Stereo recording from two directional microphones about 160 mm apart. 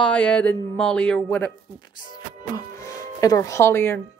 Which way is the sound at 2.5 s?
20° left (ahead or behind).